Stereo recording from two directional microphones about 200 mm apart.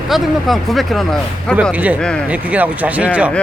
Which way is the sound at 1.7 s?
5° right (ahead or behind).